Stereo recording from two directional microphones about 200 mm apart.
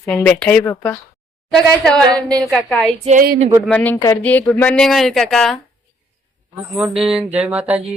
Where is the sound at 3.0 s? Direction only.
45° right (ahead or behind).